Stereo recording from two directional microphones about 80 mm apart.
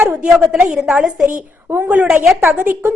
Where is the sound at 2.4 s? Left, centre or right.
Right.